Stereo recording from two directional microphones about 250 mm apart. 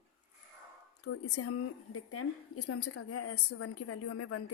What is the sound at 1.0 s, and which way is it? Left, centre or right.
A woman's voice, left.